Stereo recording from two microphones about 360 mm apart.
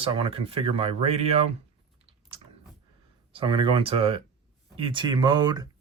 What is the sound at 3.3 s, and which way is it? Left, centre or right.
Speech, centre.